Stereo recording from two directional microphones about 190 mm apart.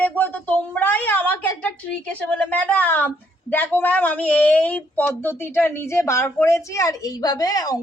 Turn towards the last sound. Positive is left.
turn(degrees=20)  # may be behind; listen again after turning